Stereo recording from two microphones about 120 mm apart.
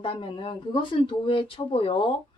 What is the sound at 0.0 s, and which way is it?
A woman's voice, 45° left (ahead or behind).